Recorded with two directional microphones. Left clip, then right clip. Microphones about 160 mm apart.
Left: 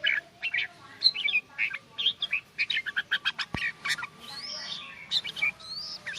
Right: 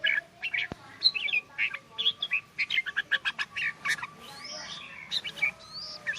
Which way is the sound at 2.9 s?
5° right (ahead or behind).